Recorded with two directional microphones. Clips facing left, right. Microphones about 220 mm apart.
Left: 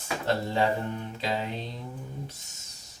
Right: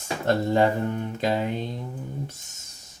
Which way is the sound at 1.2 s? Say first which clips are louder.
Right 6 dB; 50° right (ahead or behind).